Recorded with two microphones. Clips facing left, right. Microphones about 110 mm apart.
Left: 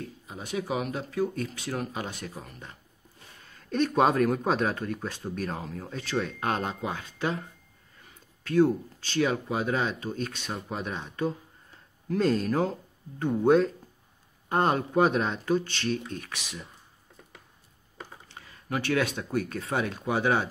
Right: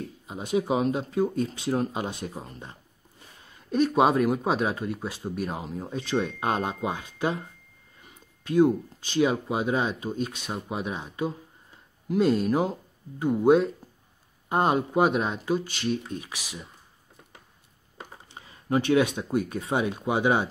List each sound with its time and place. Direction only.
0.3 s speech: 25° right (ahead or behind)
3.7 s speech: 10° right (ahead or behind)
8.5 s speech: 15° right (ahead or behind)
18.3 s speech: 20° right (ahead or behind)